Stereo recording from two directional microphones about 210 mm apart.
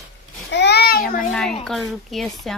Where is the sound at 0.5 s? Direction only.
55° left (ahead or behind).